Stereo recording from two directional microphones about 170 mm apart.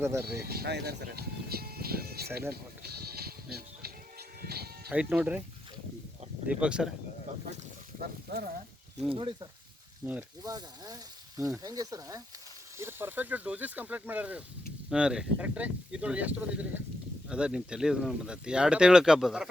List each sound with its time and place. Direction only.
0.0 s speech: 15° right (ahead or behind)
0.4 s speech: 65° right (ahead or behind)
2.5 s music: 70° right (ahead or behind)
4.9 s speech: 10° right (ahead or behind)
6.5 s speech: 5° right (ahead or behind)
8.0 s speech: 70° right (ahead or behind)
9.0 s speech: 30° right (ahead or behind)
10.1 s speech: 10° right (ahead or behind)
10.5 s speech: 20° right (ahead or behind); by 19.5 s 5° right (ahead or behind)